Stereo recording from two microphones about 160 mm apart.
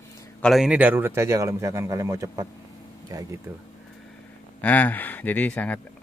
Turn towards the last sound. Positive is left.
turn(degrees=10)  # may be behind; listen again after turning